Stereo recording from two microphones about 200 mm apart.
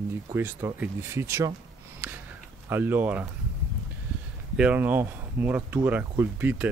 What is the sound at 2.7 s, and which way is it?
Speech, 10° right (ahead or behind).